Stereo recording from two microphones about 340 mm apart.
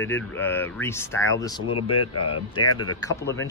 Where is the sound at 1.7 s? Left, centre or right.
Left.